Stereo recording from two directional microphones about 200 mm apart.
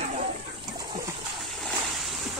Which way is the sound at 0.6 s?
20° right (ahead or behind).